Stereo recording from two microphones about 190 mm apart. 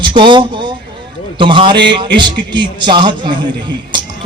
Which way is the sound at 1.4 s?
25° right (ahead or behind).